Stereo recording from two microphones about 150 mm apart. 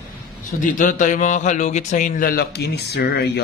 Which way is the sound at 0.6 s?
65° left (ahead or behind).